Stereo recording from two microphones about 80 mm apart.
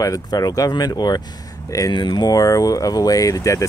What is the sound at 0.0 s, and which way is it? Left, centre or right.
Speech, left.